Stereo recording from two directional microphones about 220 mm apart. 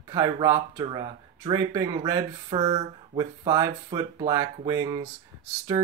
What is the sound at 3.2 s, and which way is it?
Speech, 15° right (ahead or behind).